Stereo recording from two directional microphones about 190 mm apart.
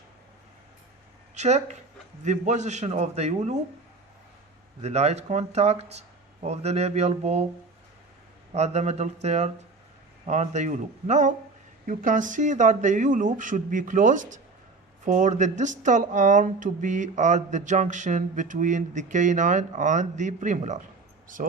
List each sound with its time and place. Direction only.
1.4 s speech: 35° right (ahead or behind)
4.8 s speech: 35° right (ahead or behind)
8.5 s speech: 35° right (ahead or behind)